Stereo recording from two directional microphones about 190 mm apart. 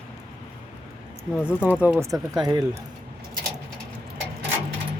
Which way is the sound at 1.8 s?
10° right (ahead or behind).